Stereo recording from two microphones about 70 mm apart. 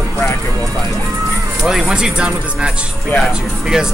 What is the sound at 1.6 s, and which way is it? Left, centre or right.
Speech, centre.